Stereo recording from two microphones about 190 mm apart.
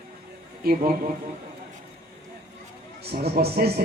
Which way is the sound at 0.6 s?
50° right (ahead or behind).